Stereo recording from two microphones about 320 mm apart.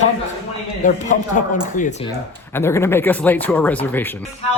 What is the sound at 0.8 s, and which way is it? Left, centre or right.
Speech, left.